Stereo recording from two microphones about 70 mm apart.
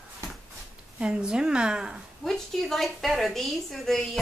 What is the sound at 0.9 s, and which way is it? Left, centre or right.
Speech, centre.